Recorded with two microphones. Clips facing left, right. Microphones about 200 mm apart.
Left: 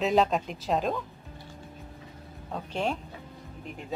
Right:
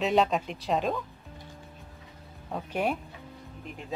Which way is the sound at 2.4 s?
5° right (ahead or behind).